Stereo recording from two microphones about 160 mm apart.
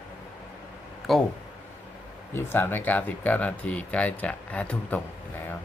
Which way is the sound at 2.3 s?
15° left (ahead or behind).